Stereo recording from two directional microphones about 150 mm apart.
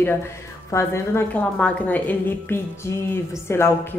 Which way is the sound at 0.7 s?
20° left (ahead or behind).